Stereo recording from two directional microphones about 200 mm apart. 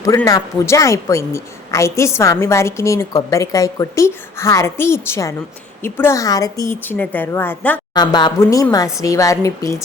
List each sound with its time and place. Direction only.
0.0 s speech: 15° left (ahead or behind)
7.9 s speech: 20° left (ahead or behind)